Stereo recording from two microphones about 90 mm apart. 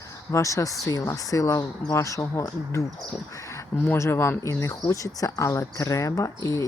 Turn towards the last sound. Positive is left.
turn(degrees=35)  # may be behind; listen again after turning